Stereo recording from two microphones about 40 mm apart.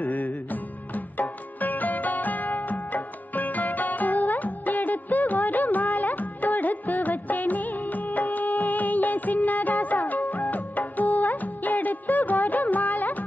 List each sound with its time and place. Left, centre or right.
0.0 s music: left